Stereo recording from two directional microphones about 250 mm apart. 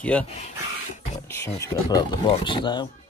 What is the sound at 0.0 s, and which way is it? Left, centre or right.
Speech, centre.